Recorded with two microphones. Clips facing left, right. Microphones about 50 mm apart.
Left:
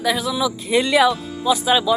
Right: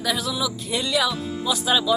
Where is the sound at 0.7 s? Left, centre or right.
Left.